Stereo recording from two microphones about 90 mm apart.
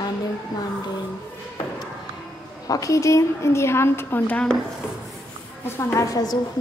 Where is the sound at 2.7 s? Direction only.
35° left (ahead or behind).